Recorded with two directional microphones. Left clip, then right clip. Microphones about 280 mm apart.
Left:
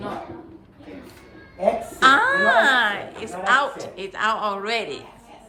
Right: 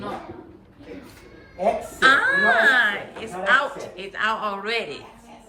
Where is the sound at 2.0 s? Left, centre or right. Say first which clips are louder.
Left 1 dB; centre.